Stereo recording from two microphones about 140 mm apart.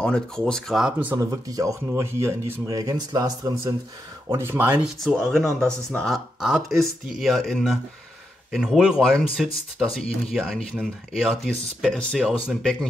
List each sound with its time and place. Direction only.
0.0 s speech: 5° left (ahead or behind); by 3.7 s 25° right (ahead or behind)
4.4 s speech: 15° right (ahead or behind)
4.8 s speech: 5° left (ahead or behind)